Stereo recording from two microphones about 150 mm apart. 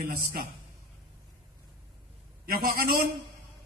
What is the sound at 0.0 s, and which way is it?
Speech, 85° right.